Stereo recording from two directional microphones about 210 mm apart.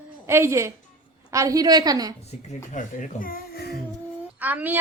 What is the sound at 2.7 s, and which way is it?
Speech, 35° left (ahead or behind).